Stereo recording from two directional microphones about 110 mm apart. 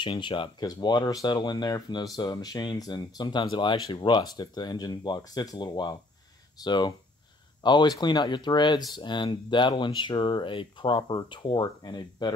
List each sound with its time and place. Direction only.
0.0 s speech: 50° left (ahead or behind)